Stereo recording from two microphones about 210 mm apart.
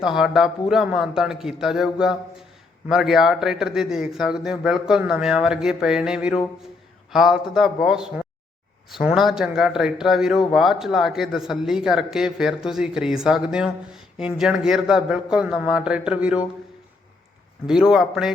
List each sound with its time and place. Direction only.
0.0 s a man's voice: centre (ahead or behind)
17.7 s a man's voice: centre (ahead or behind)